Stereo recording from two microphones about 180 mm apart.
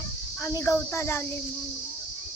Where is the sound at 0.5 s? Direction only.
15° left (ahead or behind).